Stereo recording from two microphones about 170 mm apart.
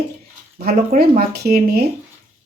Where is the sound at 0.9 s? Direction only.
55° right (ahead or behind).